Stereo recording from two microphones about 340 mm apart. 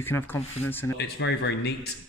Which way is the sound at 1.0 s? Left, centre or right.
Left.